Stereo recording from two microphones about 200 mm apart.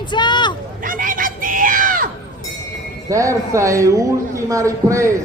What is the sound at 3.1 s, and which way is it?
A man's voice, 15° right (ahead or behind).